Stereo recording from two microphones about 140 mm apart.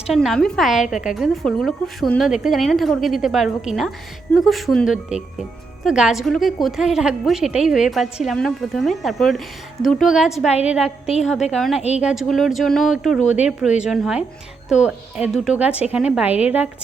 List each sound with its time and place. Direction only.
0.1 s a woman's voice: centre (ahead or behind)
13.2 s speech: 55° left (ahead or behind)
13.8 s a woman's voice: 5° right (ahead or behind)